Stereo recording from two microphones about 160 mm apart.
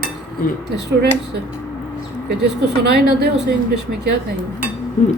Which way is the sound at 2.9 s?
90° right.